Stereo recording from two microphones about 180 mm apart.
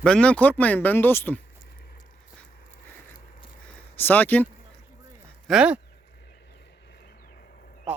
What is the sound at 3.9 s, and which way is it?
Speech, 10° left (ahead or behind).